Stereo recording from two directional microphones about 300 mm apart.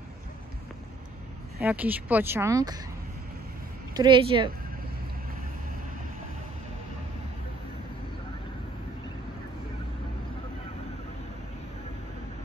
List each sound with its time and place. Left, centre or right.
1.6 s speech: centre
3.9 s speech: centre